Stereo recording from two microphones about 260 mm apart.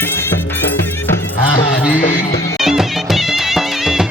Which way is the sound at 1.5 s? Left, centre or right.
Left.